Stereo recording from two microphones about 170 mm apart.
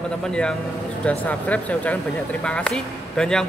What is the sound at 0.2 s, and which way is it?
A woman's voice, 5° left (ahead or behind).